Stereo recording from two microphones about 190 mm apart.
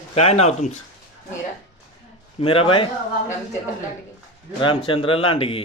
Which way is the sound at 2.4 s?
30° left (ahead or behind).